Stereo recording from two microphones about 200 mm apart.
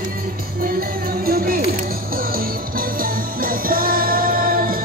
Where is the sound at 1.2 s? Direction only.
50° right (ahead or behind).